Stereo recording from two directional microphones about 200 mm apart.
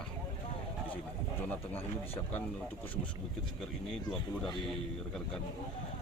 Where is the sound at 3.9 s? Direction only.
5° left (ahead or behind).